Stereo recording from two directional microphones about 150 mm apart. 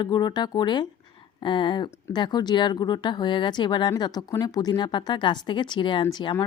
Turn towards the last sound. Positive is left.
turn(degrees=30)  # may be behind; listen again after turning